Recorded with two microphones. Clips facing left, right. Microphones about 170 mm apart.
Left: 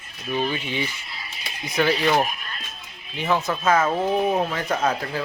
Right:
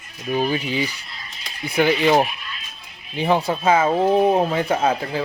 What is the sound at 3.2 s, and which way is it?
A man's voice, 35° right (ahead or behind).